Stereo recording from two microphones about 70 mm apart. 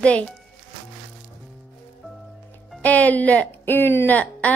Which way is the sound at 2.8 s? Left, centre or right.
Left.